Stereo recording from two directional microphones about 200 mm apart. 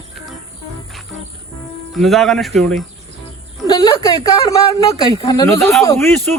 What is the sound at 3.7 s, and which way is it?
A man's voice, 20° left (ahead or behind).